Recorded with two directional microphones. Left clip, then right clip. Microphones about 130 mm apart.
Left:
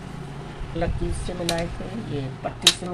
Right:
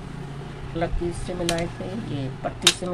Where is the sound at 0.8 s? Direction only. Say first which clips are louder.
Right 1 dB; 5° right (ahead or behind).